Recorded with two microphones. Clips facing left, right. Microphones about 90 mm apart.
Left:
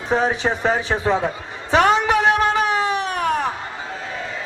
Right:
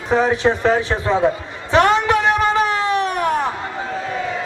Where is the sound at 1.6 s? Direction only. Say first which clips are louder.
Right 1 dB; 10° left (ahead or behind).